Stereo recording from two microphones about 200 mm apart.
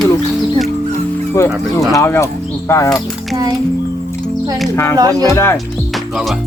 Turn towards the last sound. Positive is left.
turn(degrees=15)  # may be behind; listen again after turning